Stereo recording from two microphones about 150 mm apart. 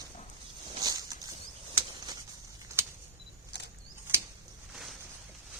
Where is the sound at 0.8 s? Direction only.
25° right (ahead or behind).